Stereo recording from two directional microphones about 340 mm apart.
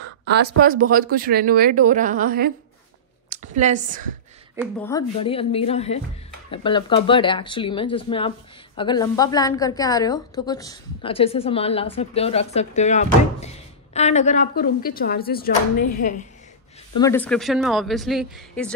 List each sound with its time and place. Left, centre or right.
0.6 s a woman's voice: right
4.6 s a woman's voice: centre; by 16.3 s left
17.0 s speech: centre